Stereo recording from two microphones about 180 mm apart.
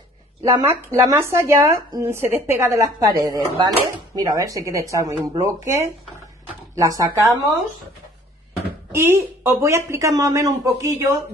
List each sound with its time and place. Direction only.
0.5 s speech: 15° right (ahead or behind)
8.9 s speech: 15° right (ahead or behind)